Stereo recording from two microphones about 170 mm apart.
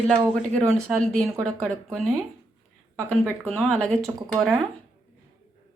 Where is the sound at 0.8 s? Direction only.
5° left (ahead or behind).